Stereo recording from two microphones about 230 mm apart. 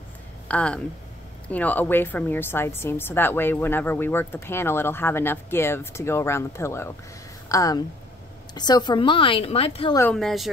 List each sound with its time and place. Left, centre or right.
0.5 s a woman's voice: centre; by 9.9 s left
9.9 s a woman's voice: centre